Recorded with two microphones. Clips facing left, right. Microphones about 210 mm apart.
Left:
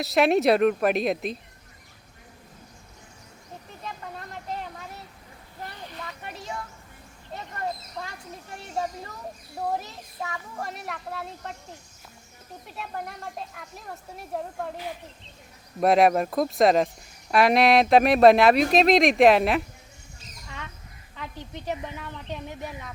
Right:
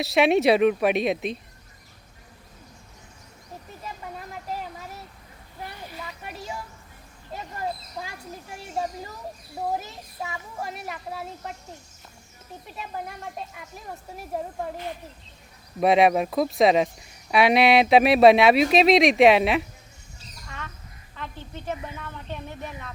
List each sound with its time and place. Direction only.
0.0 s speech: centre (ahead or behind)
3.8 s vehicle: 5° right (ahead or behind)
5.6 s a sound: 10° right (ahead or behind)
7.9 s speech: 5° right (ahead or behind)
12.6 s speech: centre (ahead or behind)
15.8 s speech: centre (ahead or behind)
21.2 s a woman's voice: 15° left (ahead or behind)